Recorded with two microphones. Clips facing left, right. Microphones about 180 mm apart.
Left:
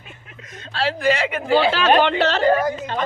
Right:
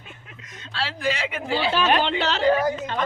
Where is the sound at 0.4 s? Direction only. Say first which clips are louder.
Left 7 dB; 55° left (ahead or behind); by 1.9 s 80° left.